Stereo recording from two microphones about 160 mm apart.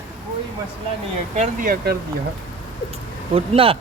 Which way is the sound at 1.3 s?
60° right (ahead or behind).